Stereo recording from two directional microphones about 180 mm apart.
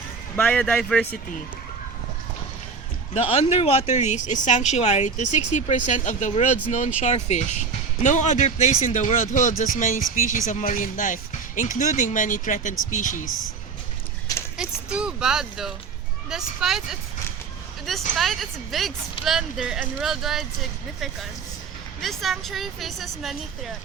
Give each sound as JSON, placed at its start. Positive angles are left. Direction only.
{"t": 0.3, "sound": "speech", "side_deg": 10}
{"t": 3.2, "sound": "speech", "side_deg": 35}
{"t": 14.6, "sound": "speech", "side_deg": -5}
{"t": 18.2, "sound": "speech", "side_deg": 0}